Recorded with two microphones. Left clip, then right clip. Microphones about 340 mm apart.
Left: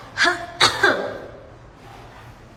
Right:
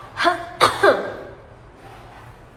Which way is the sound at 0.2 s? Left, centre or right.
Centre.